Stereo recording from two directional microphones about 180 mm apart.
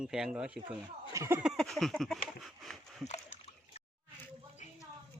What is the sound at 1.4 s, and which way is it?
Speech, centre (ahead or behind).